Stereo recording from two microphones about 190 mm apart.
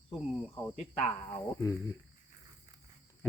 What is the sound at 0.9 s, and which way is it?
Speech, 40° left (ahead or behind).